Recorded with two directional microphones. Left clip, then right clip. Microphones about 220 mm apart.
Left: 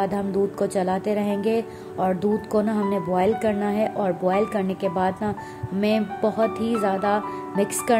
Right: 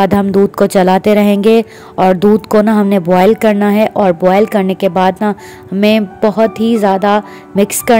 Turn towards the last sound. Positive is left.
turn(degrees=-40)  # may be behind; listen again after turning